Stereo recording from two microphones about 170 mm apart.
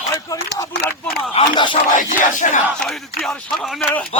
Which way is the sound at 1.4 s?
30° left (ahead or behind).